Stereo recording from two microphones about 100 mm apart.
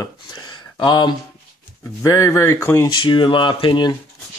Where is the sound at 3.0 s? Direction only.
55° left (ahead or behind).